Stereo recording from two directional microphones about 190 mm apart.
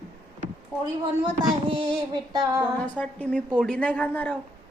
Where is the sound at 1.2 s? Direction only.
25° right (ahead or behind).